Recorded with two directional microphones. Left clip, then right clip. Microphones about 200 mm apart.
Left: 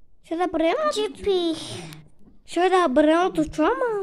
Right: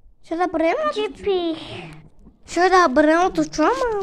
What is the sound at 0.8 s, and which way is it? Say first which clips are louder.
A child's voice: right 1 dB; 40° left (ahead or behind).